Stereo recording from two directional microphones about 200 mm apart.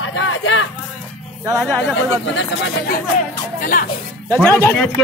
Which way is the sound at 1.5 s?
Centre (ahead or behind).